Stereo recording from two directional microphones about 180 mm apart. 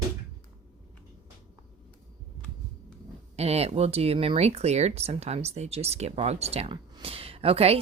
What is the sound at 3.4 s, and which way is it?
Speech, 35° right (ahead or behind).